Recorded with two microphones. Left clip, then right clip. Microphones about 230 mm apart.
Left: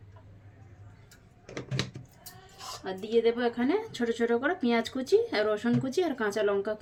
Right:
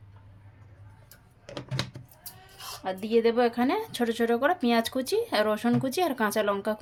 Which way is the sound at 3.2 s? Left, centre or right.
Right.